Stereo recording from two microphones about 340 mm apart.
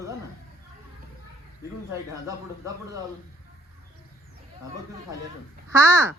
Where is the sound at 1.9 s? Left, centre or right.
Centre.